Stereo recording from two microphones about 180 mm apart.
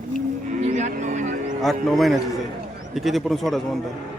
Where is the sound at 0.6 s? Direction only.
45° right (ahead or behind).